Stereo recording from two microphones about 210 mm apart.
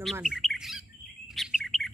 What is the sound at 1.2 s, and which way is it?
Chirp, centre (ahead or behind).